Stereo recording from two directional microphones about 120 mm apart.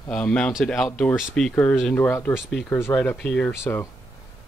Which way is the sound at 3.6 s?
20° left (ahead or behind).